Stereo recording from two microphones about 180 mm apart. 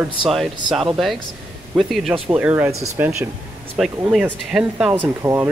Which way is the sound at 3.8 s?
Centre (ahead or behind).